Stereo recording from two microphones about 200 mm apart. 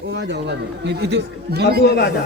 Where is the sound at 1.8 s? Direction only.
55° left (ahead or behind).